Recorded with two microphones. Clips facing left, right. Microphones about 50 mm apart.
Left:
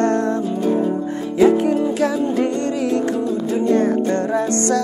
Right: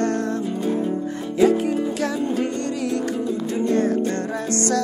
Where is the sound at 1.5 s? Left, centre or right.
Left.